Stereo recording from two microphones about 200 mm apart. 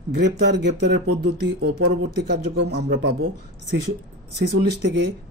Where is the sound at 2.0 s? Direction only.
60° right (ahead or behind).